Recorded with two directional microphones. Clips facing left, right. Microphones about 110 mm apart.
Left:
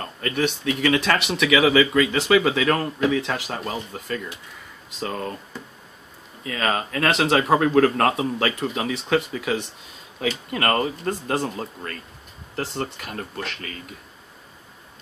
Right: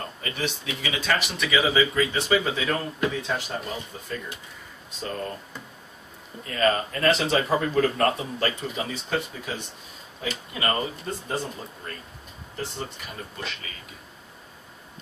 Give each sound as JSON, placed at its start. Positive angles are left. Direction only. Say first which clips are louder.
{"t": 0.2, "sound": "speech", "louder": "left 9 dB", "side_deg": 60}
{"t": 6.4, "sound": "speech", "louder": "right 1 dB", "side_deg": 75}
{"t": 10.5, "sound": "speech", "louder": "left 4 dB", "side_deg": 65}
{"t": 12.5, "sound": "speech", "louder": "left 5 dB", "side_deg": 70}